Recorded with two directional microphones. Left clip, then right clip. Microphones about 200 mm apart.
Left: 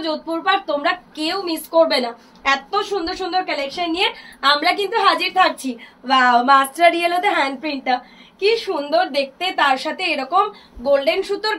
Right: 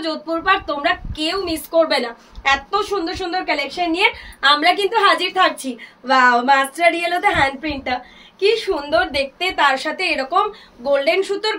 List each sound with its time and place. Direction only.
0.0 s a woman's voice: 15° right (ahead or behind)